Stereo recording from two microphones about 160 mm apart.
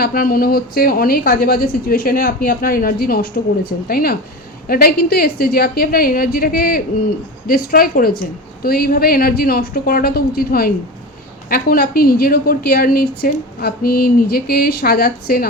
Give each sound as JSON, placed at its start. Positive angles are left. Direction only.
{"t": 0.0, "sound": "a woman's voice", "side_deg": 65}